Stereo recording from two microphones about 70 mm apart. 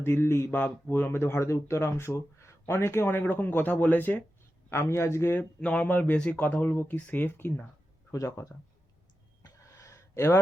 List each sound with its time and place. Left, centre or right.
0.0 s speech: left
4.7 s speech: left
5.3 s speech: left
9.4 s a sound: left